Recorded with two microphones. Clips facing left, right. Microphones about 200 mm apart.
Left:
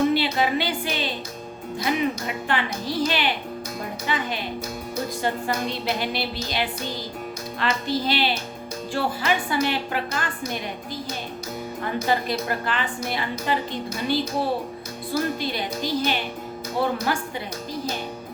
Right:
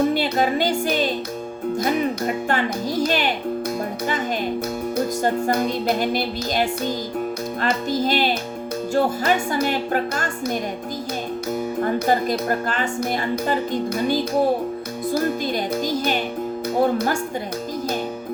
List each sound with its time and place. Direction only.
0.1 s a woman's voice: 45° right (ahead or behind)
5.2 s a woman's voice: 50° right (ahead or behind)
11.8 s a woman's voice: 45° right (ahead or behind)